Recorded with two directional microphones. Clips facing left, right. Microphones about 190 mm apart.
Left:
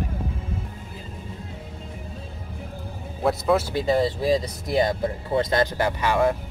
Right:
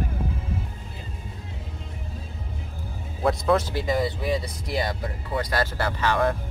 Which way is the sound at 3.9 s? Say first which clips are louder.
Left 5 dB; 30° left (ahead or behind).